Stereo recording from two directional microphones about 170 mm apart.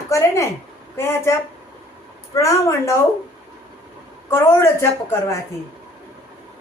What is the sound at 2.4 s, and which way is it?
Speech, 20° left (ahead or behind).